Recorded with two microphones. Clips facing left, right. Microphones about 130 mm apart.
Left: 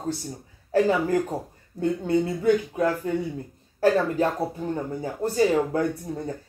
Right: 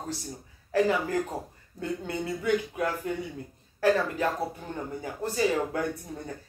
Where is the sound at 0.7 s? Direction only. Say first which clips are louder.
Left 4 dB; 30° left (ahead or behind).